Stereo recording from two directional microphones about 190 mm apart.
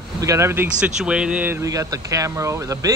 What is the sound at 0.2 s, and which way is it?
Speech, 15° right (ahead or behind).